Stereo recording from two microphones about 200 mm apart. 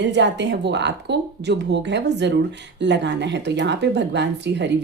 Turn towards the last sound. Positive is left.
turn(degrees=-60)  # may be behind; listen again after turning